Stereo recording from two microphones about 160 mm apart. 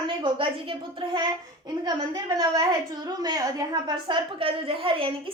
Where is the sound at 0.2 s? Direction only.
30° right (ahead or behind).